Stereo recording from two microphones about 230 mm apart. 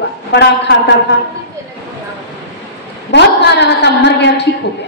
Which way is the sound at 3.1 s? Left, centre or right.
Left.